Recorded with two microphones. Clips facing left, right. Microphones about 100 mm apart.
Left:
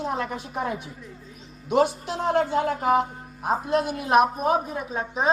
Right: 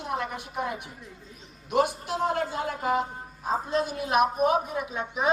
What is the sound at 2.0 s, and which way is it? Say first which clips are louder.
A man's voice: left 4 dB; 90° left.